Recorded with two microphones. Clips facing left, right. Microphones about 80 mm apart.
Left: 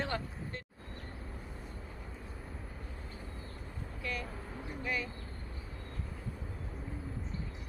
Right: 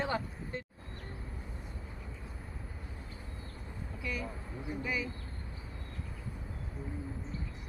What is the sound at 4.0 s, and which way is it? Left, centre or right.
Vehicle, centre.